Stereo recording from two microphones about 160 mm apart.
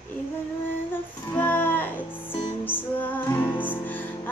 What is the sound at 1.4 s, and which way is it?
Music, 10° left (ahead or behind).